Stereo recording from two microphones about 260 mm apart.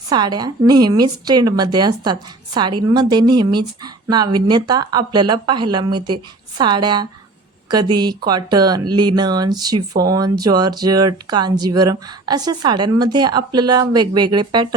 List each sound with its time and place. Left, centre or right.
0.1 s speech: centre